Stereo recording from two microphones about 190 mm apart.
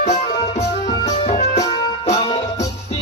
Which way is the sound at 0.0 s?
35° left (ahead or behind).